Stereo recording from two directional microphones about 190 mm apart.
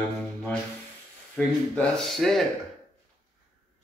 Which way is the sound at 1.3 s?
5° left (ahead or behind).